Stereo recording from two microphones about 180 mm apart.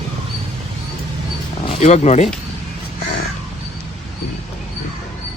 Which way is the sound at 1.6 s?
35° left (ahead or behind).